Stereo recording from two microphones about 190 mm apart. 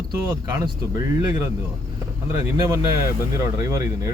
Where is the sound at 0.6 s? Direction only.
20° right (ahead or behind).